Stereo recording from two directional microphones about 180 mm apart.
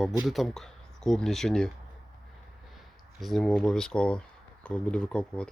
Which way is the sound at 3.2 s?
Centre (ahead or behind).